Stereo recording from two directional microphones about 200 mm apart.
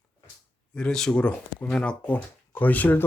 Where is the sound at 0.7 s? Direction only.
5° left (ahead or behind).